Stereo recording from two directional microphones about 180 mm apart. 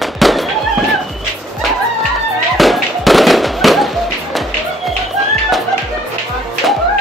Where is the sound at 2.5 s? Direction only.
Centre (ahead or behind).